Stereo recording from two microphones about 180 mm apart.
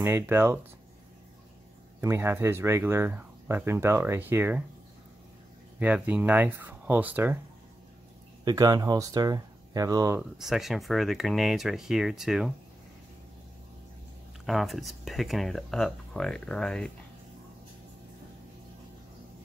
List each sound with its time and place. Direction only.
0.0 s speech: 15° right (ahead or behind)
2.0 s speech: 15° right (ahead or behind)
5.8 s speech: 10° right (ahead or behind)
8.5 s speech: 20° right (ahead or behind)
10.3 s speech: centre (ahead or behind)
14.4 s speech: centre (ahead or behind)